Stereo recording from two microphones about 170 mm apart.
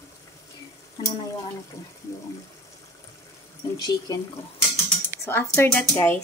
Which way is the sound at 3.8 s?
20° left (ahead or behind).